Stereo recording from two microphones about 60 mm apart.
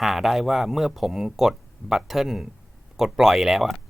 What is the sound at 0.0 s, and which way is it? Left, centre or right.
Speech, centre.